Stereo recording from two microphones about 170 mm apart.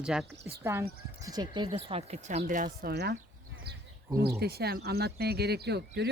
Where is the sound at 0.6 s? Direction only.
15° right (ahead or behind); by 2.6 s 45° right (ahead or behind).